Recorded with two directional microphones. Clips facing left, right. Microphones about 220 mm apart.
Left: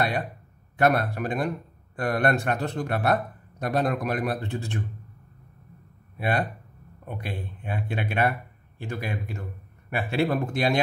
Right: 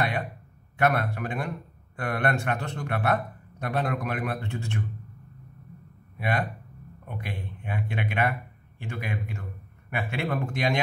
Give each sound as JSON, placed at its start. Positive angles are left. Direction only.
{"t": 0.7, "sound": "a man's voice", "side_deg": 35}
{"t": 6.1, "sound": "a man's voice", "side_deg": 35}